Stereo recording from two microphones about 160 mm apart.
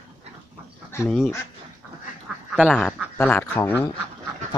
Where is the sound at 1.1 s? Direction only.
Centre (ahead or behind).